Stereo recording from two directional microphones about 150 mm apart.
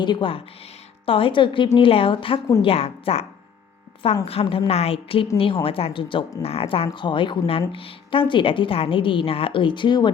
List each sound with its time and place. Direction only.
0.0 s a woman's voice: 30° left (ahead or behind)
4.3 s a woman's voice: 40° left (ahead or behind)